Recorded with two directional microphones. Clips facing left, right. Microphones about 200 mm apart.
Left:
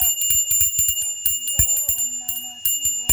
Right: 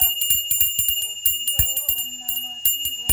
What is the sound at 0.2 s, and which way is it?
Bell, 25° right (ahead or behind).